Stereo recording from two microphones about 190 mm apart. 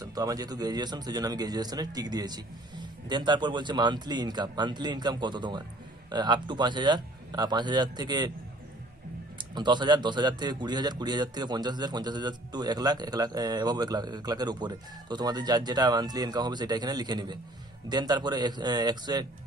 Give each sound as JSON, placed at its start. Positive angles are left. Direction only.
{"t": 0.0, "sound": "a man's voice", "side_deg": -20}
{"t": 9.6, "sound": "a man's voice", "side_deg": -25}